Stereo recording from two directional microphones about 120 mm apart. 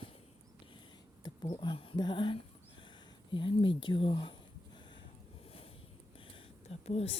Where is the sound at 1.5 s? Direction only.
45° left (ahead or behind).